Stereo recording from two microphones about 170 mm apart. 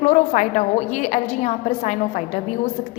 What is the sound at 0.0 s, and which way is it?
A woman's voice, 45° left (ahead or behind).